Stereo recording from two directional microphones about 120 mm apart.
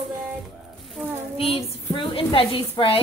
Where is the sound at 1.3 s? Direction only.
55° left (ahead or behind).